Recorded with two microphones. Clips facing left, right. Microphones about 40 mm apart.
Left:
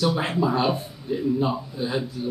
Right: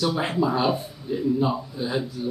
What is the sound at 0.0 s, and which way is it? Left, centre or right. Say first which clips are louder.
Speech: even; centre.